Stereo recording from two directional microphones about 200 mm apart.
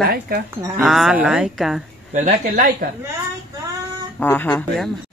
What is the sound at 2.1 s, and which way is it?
Speech, 40° right (ahead or behind).